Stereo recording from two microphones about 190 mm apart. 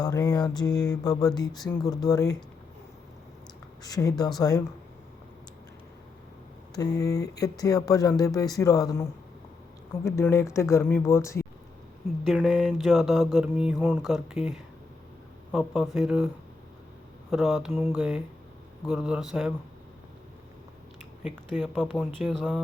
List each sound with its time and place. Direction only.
0.0 s speech: 20° left (ahead or behind)
3.8 s speech: 20° left (ahead or behind)
6.7 s speech: 20° left (ahead or behind)
12.2 s mantra: centre (ahead or behind)
15.5 s mantra: centre (ahead or behind)
17.3 s mantra: centre (ahead or behind)
21.2 s mantra: centre (ahead or behind)